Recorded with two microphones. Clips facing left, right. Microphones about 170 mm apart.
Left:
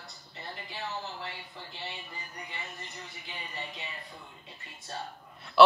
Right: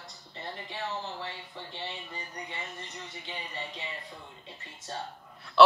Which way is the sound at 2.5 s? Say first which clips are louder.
Right 2 dB; 25° right (ahead or behind).